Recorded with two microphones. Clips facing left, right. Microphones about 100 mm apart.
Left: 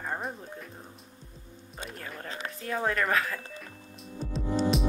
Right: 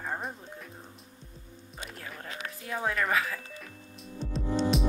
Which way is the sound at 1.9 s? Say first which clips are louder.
Left 3 dB; centre (ahead or behind).